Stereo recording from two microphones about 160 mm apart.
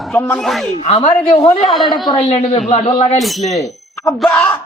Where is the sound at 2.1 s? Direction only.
40° left (ahead or behind).